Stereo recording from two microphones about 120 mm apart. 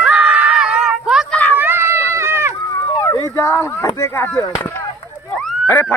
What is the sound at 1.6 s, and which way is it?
Run, 20° right (ahead or behind).